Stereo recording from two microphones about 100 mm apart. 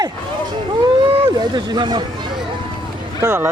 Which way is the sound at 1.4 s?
45° right (ahead or behind).